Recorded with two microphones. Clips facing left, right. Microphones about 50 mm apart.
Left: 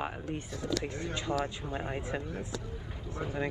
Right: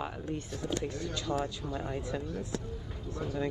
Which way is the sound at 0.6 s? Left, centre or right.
Left.